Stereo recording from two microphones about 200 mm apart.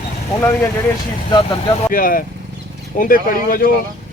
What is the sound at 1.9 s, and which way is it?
Speech, 45° left (ahead or behind).